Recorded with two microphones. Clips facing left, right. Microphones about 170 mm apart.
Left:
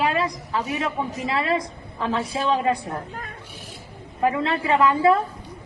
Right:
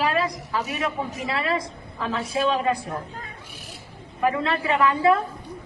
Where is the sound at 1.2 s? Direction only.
25° left (ahead or behind).